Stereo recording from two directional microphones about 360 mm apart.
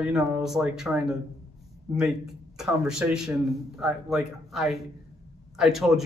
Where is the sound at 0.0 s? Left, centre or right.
Centre.